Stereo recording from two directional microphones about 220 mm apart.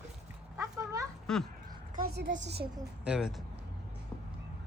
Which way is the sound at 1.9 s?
45° right (ahead or behind).